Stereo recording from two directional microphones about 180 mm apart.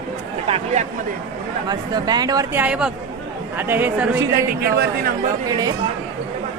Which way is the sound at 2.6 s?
5° right (ahead or behind).